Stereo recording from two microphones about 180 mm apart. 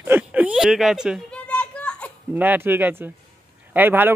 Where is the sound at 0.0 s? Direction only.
10° right (ahead or behind); by 2.1 s 5° left (ahead or behind).